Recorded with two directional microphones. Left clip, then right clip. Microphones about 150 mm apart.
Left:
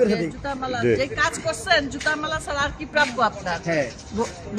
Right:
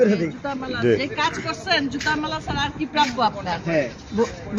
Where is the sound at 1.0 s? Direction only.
40° left (ahead or behind).